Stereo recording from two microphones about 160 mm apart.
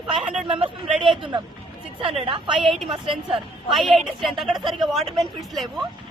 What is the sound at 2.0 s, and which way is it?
Speech, 35° right (ahead or behind).